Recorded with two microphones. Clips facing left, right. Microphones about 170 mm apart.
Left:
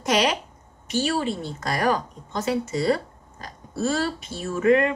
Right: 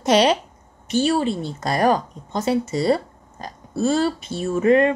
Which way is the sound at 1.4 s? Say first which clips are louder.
Right 5 dB; 25° right (ahead or behind).